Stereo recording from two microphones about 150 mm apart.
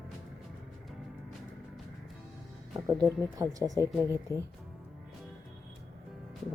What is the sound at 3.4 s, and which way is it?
Speech, 20° right (ahead or behind).